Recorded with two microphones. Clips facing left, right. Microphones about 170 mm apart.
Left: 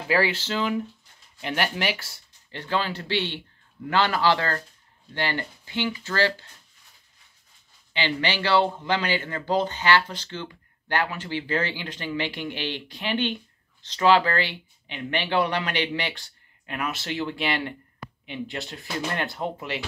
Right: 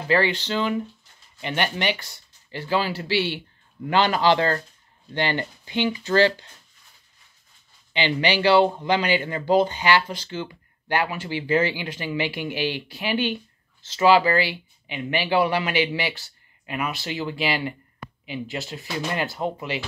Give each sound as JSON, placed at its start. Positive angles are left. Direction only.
{"t": 0.1, "sound": "speech", "side_deg": 5}
{"t": 7.9, "sound": "speech", "side_deg": -15}